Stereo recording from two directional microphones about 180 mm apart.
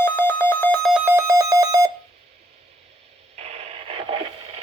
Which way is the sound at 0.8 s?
10° right (ahead or behind).